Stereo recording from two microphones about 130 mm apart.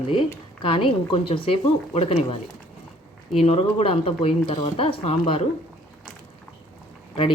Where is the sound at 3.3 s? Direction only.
50° left (ahead or behind).